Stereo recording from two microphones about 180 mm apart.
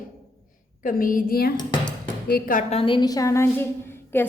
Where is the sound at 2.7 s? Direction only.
30° left (ahead or behind); by 4.2 s 10° left (ahead or behind).